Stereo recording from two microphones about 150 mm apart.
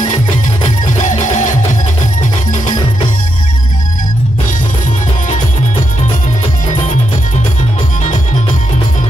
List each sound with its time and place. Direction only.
0.7 s music: 55° left (ahead or behind)